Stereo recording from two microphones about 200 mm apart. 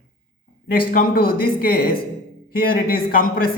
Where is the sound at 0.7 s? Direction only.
45° left (ahead or behind).